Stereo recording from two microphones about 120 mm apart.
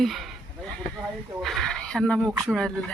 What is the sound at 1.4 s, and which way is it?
Speech, 5° left (ahead or behind).